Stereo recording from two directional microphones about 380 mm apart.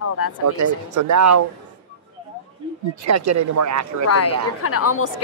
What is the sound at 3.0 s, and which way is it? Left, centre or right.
A man's voice, right.